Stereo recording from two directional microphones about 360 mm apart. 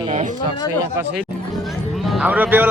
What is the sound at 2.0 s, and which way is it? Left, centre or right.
Speech, centre.